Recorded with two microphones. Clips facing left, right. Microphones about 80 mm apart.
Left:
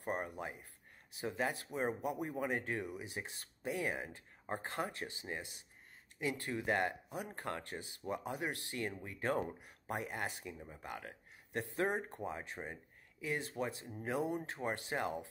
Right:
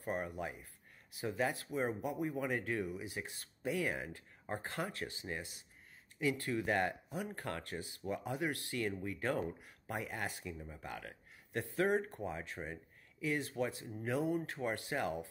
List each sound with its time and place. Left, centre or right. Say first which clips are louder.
0.0 s speech: right 1 dB; left